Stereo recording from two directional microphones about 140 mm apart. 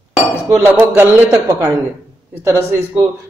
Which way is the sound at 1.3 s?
25° right (ahead or behind).